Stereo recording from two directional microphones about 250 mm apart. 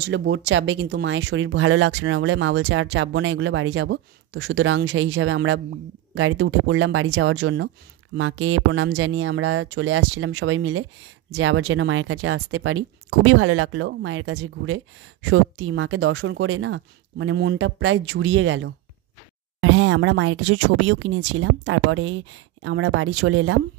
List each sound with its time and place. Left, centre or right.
0.0 s speech: right